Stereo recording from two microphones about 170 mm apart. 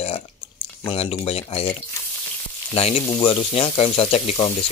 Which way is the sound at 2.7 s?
35° left (ahead or behind).